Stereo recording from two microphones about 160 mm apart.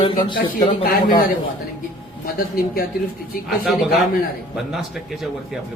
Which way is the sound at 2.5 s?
70° left (ahead or behind).